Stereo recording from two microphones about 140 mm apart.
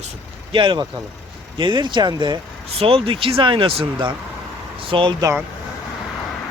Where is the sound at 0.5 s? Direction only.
35° right (ahead or behind).